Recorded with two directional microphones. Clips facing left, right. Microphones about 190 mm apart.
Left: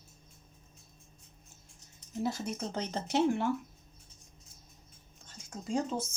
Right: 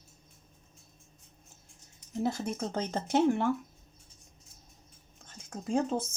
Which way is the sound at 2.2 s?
50° right (ahead or behind).